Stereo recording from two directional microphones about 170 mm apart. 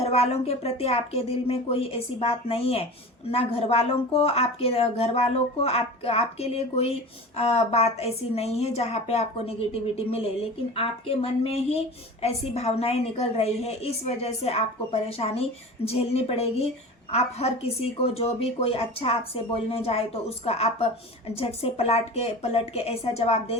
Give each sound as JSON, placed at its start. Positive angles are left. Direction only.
{"t": 0.0, "sound": "speech", "side_deg": 35}